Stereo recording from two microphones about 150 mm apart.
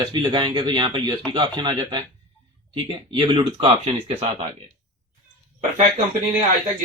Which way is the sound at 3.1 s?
30° right (ahead or behind).